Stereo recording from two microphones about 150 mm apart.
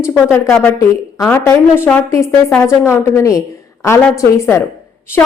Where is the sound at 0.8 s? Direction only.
20° left (ahead or behind).